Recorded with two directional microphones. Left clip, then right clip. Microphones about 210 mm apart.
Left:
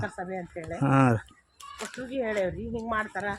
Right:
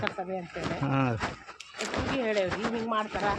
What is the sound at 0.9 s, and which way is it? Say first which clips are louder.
Speech: left 7 dB; 50° left (ahead or behind).